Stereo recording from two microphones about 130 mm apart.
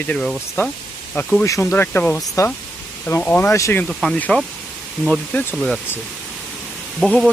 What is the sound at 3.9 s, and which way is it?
Speech, 5° left (ahead or behind).